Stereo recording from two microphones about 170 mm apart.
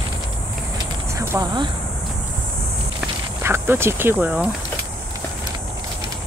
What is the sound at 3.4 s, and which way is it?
Speech, 15° right (ahead or behind).